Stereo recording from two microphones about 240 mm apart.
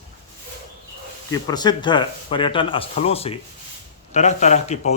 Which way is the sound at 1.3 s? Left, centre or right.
Centre.